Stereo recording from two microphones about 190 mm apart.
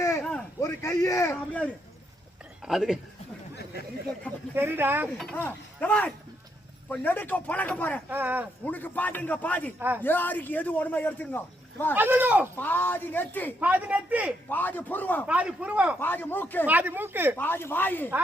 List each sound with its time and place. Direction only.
0.0 s a man's voice: 10° left (ahead or behind)
2.6 s a man's voice: centre (ahead or behind)
4.5 s a man's voice: 10° right (ahead or behind)
5.1 s a man's voice: 5° left (ahead or behind)
8.1 s a man's voice: 10° right (ahead or behind)
8.6 s a man's voice: 10° left (ahead or behind)
11.9 s a man's voice: 10° right (ahead or behind)
12.5 s a man's voice: 10° left (ahead or behind)
13.6 s a man's voice: 10° right (ahead or behind)
14.5 s a man's voice: 10° left (ahead or behind)
15.3 s a man's voice: 5° right (ahead or behind)
16.0 s a man's voice: 10° left (ahead or behind)
16.6 s a man's voice: 10° right (ahead or behind)
17.3 s a man's voice: 10° left (ahead or behind)